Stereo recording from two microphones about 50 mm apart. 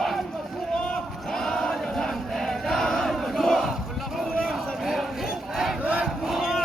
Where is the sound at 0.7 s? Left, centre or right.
Centre.